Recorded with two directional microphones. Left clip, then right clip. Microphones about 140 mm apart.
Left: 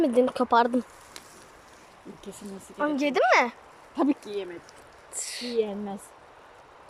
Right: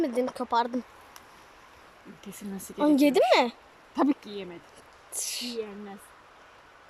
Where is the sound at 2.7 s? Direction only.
30° right (ahead or behind).